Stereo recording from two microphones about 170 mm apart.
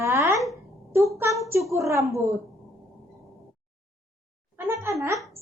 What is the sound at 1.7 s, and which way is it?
Speech, 15° right (ahead or behind).